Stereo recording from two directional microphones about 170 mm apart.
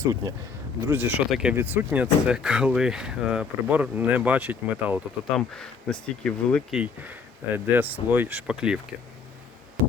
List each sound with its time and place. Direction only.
0.1 s speech: 20° right (ahead or behind)
5.4 s speech: 5° left (ahead or behind)